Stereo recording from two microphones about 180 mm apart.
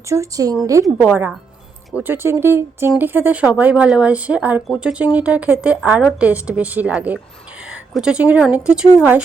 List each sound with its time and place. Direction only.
0.1 s speech: 20° right (ahead or behind)
0.9 s speech: 5° right (ahead or behind)